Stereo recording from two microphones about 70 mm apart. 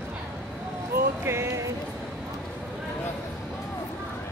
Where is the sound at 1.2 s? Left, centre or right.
Right.